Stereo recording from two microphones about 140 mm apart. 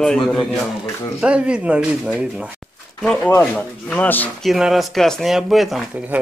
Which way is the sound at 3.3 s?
10° left (ahead or behind).